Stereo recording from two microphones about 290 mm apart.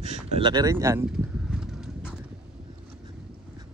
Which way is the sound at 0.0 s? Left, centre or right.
Centre.